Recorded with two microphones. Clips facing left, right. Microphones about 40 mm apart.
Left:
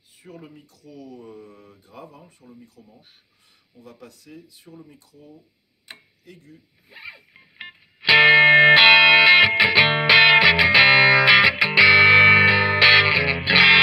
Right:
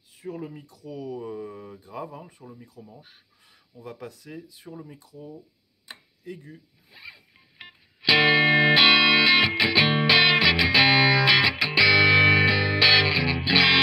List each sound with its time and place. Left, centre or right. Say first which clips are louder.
0.9 s speech: right 6 dB; centre
1.3 s mantra: right 7 dB; right
2.0 s speech: right 4 dB; centre
6.9 s music: left 5 dB; left